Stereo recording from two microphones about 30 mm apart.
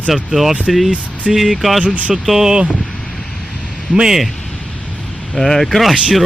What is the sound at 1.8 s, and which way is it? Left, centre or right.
Speech, right.